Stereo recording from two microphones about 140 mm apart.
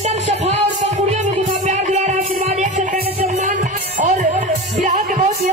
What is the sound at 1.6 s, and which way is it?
Music, 55° right (ahead or behind).